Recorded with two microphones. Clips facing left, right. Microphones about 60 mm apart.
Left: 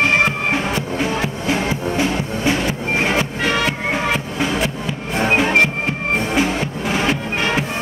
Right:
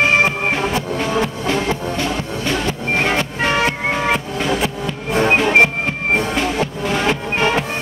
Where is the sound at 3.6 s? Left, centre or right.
Centre.